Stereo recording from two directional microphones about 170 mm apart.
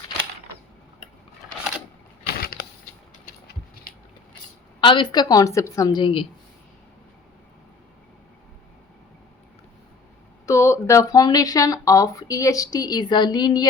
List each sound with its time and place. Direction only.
2.2 s a sound: 60° left (ahead or behind)
4.8 s speech: 30° left (ahead or behind)
10.4 s speech: 15° left (ahead or behind)